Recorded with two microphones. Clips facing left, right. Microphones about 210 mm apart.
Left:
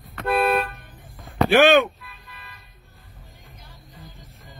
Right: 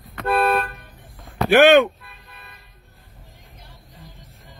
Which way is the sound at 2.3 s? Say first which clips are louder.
Right 1 dB; 55° right (ahead or behind).